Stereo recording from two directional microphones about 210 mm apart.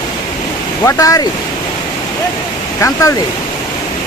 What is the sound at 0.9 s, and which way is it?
Speech, 15° left (ahead or behind).